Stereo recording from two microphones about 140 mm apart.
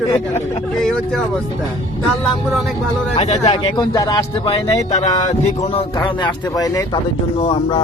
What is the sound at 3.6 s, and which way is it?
Speech, 30° left (ahead or behind).